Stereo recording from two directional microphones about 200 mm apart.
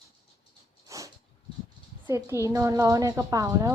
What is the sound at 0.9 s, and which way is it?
Dog, 15° right (ahead or behind).